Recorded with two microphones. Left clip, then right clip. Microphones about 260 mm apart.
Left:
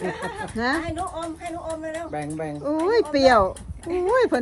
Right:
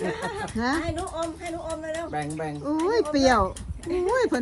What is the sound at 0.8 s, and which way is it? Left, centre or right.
Speech, left.